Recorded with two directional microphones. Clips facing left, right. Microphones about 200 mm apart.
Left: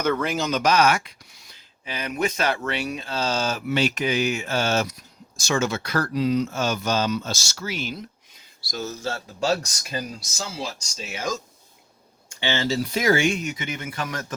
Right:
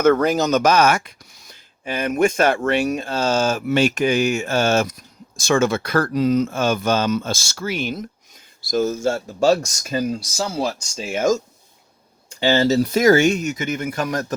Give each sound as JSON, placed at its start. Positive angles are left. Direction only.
{"t": 0.0, "sound": "speech", "side_deg": -45}